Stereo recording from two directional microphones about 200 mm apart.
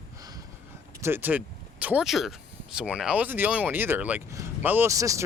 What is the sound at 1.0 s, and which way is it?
Speech, 10° right (ahead or behind).